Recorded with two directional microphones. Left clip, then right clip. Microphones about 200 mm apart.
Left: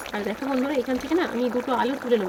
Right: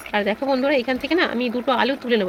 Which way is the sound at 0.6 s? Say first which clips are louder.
Right 5 dB; 15° right (ahead or behind).